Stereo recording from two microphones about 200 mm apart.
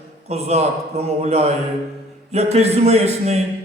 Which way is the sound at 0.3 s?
30° right (ahead or behind).